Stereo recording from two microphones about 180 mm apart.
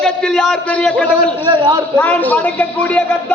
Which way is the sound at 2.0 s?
10° left (ahead or behind).